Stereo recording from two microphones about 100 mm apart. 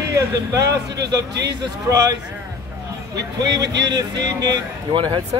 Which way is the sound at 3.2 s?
40° right (ahead or behind).